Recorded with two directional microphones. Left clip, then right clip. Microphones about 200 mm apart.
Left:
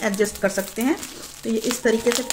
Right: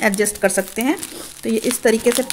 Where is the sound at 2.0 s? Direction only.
20° right (ahead or behind).